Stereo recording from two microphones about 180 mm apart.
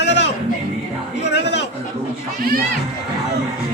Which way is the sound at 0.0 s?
75° left (ahead or behind).